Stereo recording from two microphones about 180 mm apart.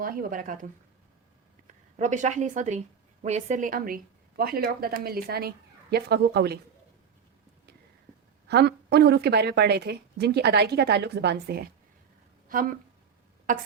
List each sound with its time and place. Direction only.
0.0 s a woman's voice: 50° right (ahead or behind)
8.4 s a woman's voice: 65° right (ahead or behind)
13.5 s a woman's voice: 45° right (ahead or behind)